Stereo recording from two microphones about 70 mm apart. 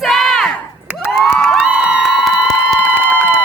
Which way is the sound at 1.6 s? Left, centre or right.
Centre.